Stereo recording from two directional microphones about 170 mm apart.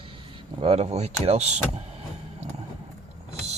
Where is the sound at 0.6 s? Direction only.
40° right (ahead or behind).